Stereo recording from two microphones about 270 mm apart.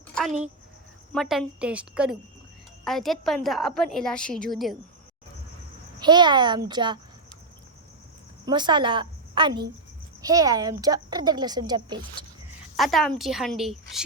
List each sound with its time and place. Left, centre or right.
0.3 s speech: right
1.1 s a woman's voice: centre
6.0 s speech: centre
8.4 s a woman's voice: centre
12.7 s a woman's voice: centre